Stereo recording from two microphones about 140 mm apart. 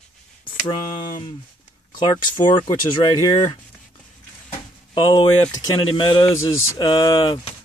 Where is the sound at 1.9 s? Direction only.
30° left (ahead or behind).